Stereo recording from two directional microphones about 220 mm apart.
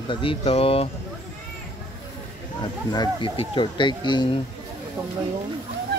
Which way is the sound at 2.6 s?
20° left (ahead or behind).